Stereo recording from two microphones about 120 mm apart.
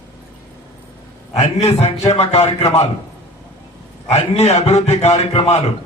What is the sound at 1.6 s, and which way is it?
A man's voice, 60° left (ahead or behind).